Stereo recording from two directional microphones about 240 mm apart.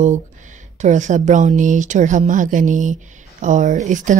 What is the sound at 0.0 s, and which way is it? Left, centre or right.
A woman's voice, right.